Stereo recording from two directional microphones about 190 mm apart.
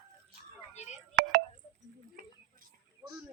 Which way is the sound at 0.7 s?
35° left (ahead or behind).